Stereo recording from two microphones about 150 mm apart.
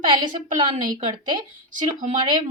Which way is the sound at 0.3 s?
60° right (ahead or behind).